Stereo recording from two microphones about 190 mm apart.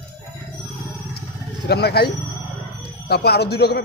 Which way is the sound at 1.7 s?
55° left (ahead or behind).